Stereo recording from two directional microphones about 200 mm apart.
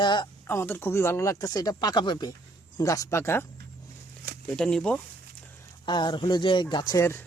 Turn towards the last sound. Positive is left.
turn(degrees=15)  # may be behind; listen again after turning